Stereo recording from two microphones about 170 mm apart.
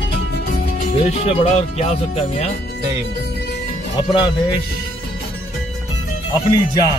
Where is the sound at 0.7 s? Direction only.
50° left (ahead or behind).